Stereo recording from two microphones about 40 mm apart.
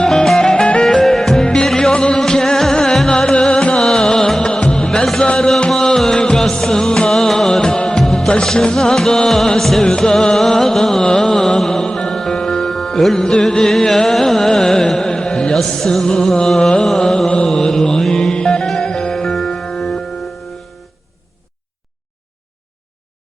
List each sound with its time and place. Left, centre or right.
0.1 s music: centre
5.7 s music: centre
8.4 s music: left
9.8 s music: centre
15.5 s music: centre
17.4 s mantra: centre
18.2 s music: centre